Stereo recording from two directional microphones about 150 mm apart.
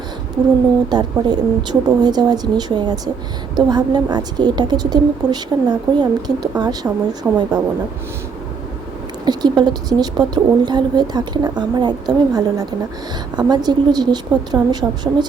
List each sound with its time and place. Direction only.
0.9 s speech: 30° right (ahead or behind)
9.2 s speech: 30° right (ahead or behind)